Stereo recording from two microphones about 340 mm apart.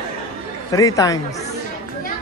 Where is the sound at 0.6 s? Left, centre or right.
Centre.